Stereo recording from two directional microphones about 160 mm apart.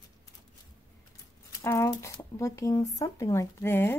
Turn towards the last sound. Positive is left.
turn(degrees=15)  # may be behind; listen again after turning